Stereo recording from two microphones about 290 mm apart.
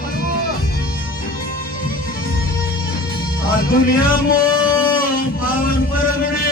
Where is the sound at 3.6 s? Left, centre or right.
Left.